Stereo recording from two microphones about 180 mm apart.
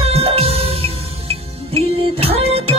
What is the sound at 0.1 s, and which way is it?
Music, 35° right (ahead or behind).